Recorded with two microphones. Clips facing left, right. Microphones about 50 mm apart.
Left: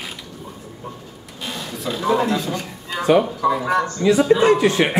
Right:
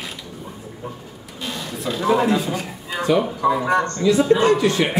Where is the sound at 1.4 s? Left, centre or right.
Centre.